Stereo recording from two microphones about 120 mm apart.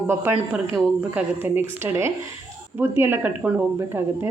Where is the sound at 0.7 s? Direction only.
20° right (ahead or behind).